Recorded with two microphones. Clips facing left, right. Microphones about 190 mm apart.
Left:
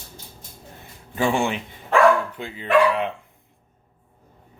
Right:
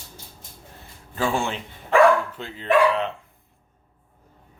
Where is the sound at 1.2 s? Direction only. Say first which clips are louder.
Left 3 dB; 15° left (ahead or behind).